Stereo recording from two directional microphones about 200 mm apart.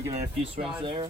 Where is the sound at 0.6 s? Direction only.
Centre (ahead or behind).